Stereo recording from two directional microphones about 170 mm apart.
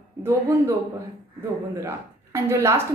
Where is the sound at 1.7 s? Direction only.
15° right (ahead or behind).